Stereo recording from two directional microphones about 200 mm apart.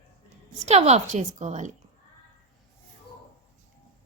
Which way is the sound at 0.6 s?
35° right (ahead or behind).